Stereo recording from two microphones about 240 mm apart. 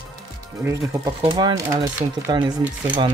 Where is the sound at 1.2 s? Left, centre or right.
Centre.